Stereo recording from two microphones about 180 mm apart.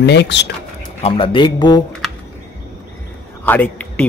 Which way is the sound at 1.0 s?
30° left (ahead or behind).